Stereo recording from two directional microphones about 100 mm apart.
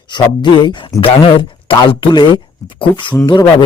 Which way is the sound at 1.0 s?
65° left (ahead or behind).